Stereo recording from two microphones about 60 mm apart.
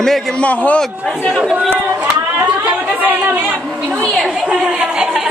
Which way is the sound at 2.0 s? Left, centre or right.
Right.